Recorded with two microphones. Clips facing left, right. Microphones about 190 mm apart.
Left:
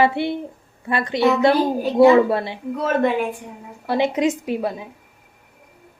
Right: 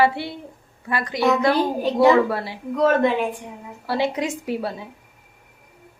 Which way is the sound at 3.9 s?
20° left (ahead or behind).